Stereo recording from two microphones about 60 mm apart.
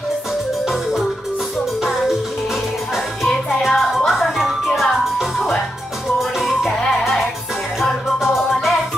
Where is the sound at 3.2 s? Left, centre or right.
Centre.